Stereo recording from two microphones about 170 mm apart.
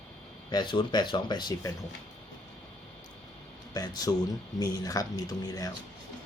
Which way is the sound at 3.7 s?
25° left (ahead or behind).